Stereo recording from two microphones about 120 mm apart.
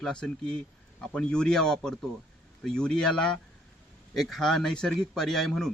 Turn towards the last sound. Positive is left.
turn(degrees=5)  # may be behind; listen again after turning